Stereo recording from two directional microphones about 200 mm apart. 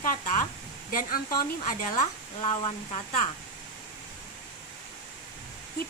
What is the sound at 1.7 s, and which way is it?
Speech, 40° left (ahead or behind).